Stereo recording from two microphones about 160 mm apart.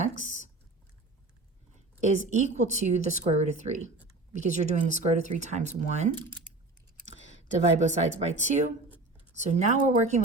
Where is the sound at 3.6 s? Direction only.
35° right (ahead or behind).